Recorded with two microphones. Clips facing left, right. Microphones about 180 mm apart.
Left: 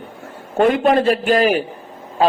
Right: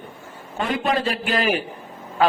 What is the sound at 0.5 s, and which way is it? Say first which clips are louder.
A man's voice: left 9 dB; 55° left (ahead or behind).